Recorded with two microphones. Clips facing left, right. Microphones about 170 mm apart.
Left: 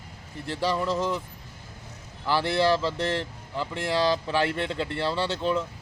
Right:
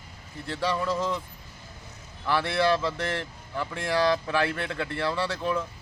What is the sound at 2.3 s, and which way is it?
Speech, 30° left (ahead or behind).